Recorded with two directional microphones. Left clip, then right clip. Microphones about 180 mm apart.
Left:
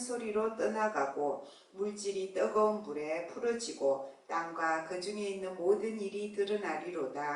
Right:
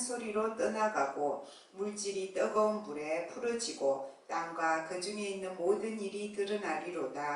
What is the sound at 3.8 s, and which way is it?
Speech, 30° left (ahead or behind).